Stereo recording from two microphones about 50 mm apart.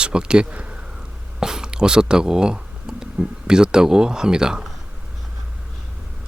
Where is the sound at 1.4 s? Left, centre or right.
Centre.